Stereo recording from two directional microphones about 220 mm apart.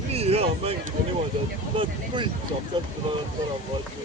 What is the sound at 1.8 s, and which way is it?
Speech, 20° right (ahead or behind).